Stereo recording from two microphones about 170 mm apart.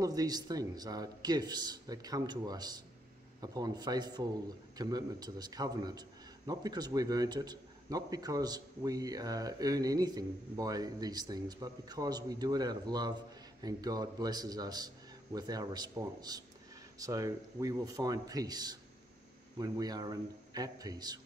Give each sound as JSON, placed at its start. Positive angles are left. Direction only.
{"t": 0.0, "sound": "a man's voice", "side_deg": -20}